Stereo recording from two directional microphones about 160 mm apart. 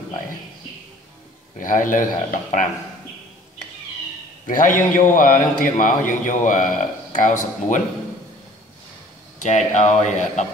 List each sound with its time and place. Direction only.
1.6 s speech: 55° left (ahead or behind)
4.5 s speech: 55° left (ahead or behind)
9.4 s speech: 50° left (ahead or behind)